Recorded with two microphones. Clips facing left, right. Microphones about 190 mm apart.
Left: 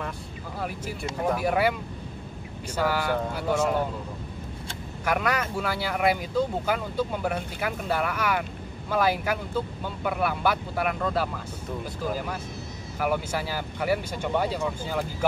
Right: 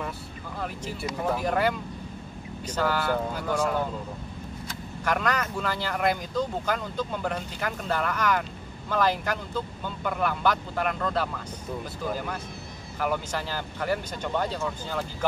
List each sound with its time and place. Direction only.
1.2 s speech: 10° left (ahead or behind)
5.0 s speech: 10° left (ahead or behind)